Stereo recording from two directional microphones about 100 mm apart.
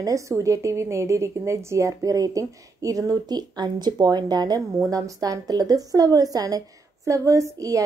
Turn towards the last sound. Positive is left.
turn(degrees=-35)  # may be behind; listen again after turning